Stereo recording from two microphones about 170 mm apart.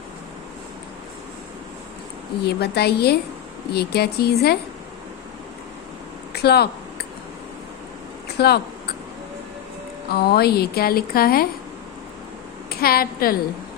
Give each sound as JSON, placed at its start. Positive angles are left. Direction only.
{"t": 2.4, "sound": "a woman's voice", "side_deg": 70}
{"t": 6.3, "sound": "speech", "side_deg": 70}
{"t": 8.4, "sound": "a woman's voice", "side_deg": 70}
{"t": 10.1, "sound": "speech", "side_deg": 70}
{"t": 12.7, "sound": "a woman's voice", "side_deg": 60}